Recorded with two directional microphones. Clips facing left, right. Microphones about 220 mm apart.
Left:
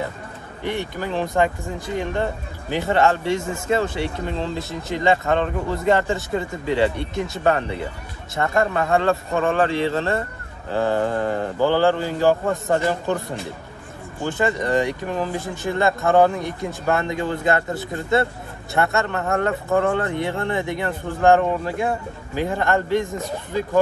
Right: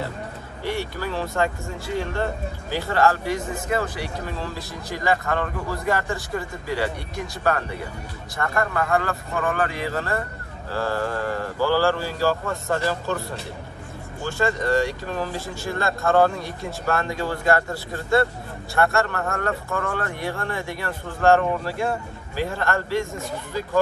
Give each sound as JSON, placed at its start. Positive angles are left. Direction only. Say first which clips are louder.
{"t": 0.7, "sound": "a man's voice", "louder": "left 2 dB", "side_deg": 20}
{"t": 2.7, "sound": "a man's voice", "louder": "left 2 dB", "side_deg": 20}
{"t": 14.2, "sound": "a man's voice", "louder": "left 2 dB", "side_deg": 20}